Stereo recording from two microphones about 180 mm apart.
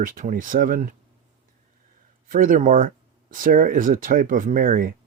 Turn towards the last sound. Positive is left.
turn(degrees=-50)  # may be behind; listen again after turning